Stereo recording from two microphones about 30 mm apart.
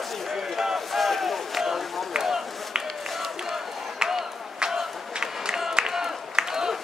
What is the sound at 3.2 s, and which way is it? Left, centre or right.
Crowd, centre.